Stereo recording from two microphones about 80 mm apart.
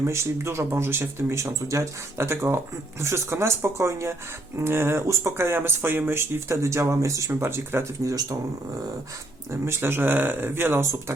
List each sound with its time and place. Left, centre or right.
0.0 s speech: right
8.0 s speech: right
9.5 s speech: right